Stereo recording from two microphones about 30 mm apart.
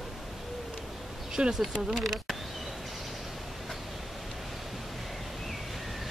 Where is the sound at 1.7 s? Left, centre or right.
Right.